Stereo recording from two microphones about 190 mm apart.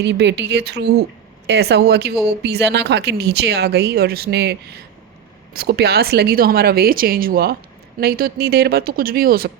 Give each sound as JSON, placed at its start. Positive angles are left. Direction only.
{"t": 0.0, "sound": "a woman's voice", "side_deg": -65}